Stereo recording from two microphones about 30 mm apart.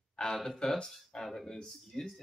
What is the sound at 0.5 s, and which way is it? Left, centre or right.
Speech, left.